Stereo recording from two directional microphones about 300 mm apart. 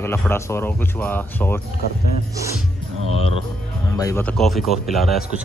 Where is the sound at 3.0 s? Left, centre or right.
Right.